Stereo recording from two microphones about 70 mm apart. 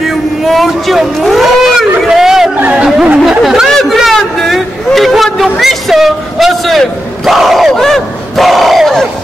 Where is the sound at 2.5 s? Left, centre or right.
Right.